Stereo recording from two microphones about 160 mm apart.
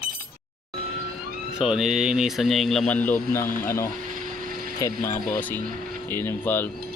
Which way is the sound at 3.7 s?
15° left (ahead or behind).